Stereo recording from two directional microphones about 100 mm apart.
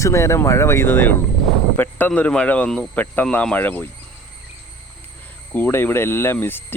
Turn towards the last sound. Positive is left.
turn(degrees=20)  # may be behind; listen again after turning